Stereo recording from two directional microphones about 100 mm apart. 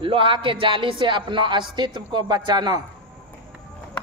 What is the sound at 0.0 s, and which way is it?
Speech, 60° right (ahead or behind).